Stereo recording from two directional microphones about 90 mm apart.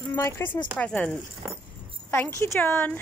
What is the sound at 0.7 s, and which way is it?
Speech, 15° left (ahead or behind).